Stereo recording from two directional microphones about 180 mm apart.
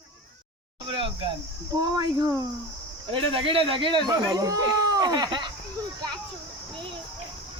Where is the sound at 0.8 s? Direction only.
30° right (ahead or behind).